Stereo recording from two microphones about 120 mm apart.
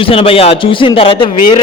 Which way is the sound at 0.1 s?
50° left (ahead or behind).